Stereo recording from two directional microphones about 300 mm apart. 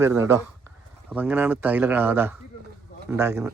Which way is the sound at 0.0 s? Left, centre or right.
Centre.